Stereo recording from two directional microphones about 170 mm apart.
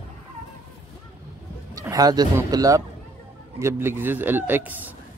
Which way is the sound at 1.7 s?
20° right (ahead or behind).